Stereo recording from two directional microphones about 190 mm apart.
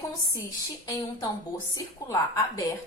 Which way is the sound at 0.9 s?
15° left (ahead or behind).